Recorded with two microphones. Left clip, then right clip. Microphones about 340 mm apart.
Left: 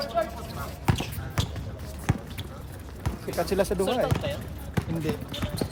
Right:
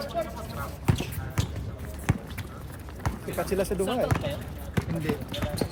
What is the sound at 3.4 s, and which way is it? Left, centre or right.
Speech, left.